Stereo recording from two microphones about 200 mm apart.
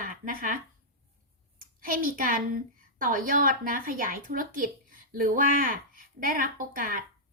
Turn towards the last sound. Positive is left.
turn(degrees=-45)  # may be behind; listen again after turning